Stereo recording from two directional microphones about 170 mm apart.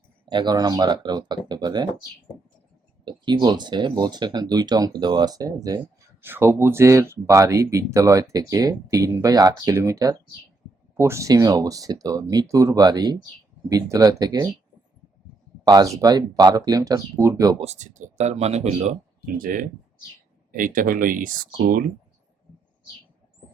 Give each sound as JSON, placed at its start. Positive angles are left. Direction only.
{"t": 0.3, "sound": "speech", "side_deg": -25}
{"t": 3.0, "sound": "speech", "side_deg": -25}
{"t": 15.6, "sound": "speech", "side_deg": -20}
{"t": 17.6, "sound": "speech", "side_deg": -40}
{"t": 19.2, "sound": "speech", "side_deg": -55}